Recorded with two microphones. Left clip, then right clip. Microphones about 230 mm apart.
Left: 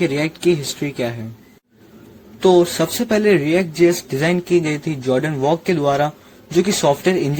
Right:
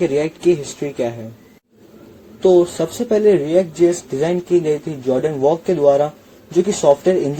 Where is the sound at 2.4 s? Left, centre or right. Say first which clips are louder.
Even; left.